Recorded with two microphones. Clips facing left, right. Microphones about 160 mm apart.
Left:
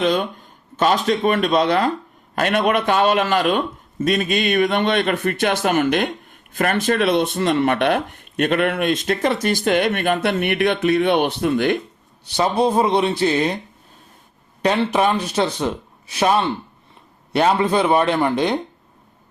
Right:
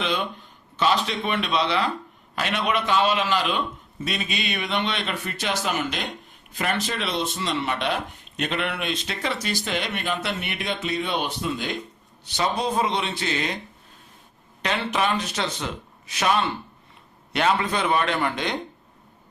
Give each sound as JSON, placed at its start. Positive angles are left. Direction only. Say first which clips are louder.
{"t": 0.0, "sound": "a man's voice", "louder": "left 7 dB", "side_deg": 45}
{"t": 12.6, "sound": "a man's voice", "louder": "left 7 dB", "side_deg": 30}
{"t": 14.6, "sound": "a man's voice", "louder": "left 7 dB", "side_deg": 35}